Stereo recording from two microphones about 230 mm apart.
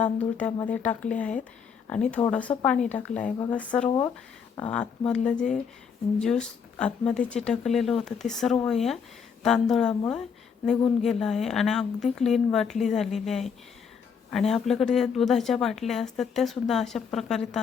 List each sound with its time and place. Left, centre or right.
0.0 s speech: centre